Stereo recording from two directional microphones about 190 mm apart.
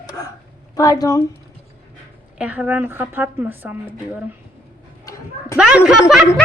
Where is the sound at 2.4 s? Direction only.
10° right (ahead or behind).